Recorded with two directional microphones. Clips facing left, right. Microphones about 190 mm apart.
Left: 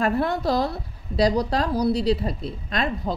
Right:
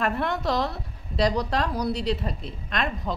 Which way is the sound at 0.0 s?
35° left (ahead or behind).